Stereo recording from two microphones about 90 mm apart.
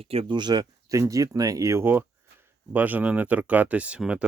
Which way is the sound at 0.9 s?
35° right (ahead or behind).